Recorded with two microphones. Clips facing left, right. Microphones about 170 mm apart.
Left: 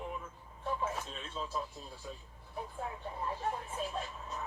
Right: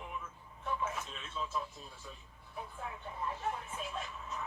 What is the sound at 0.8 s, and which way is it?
Speech, 35° left (ahead or behind).